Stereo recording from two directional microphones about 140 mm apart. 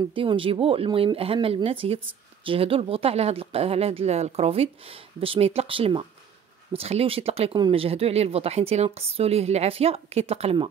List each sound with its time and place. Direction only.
0.1 s speech: 40° right (ahead or behind)